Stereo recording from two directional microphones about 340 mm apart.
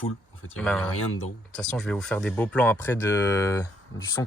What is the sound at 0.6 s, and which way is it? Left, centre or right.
Speech, centre.